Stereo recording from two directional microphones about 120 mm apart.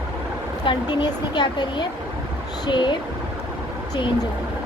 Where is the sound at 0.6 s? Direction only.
40° left (ahead or behind).